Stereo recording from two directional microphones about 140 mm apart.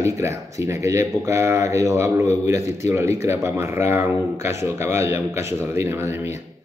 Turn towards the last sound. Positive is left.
turn(degrees=-15)  # may be behind; listen again after turning